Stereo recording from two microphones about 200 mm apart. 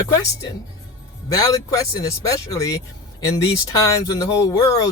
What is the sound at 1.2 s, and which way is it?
Speech, 20° left (ahead or behind).